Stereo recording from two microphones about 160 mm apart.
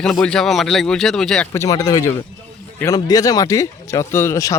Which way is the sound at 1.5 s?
20° left (ahead or behind).